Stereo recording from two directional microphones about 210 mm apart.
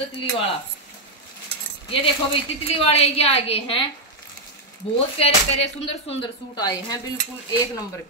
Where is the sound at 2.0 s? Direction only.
25° left (ahead or behind).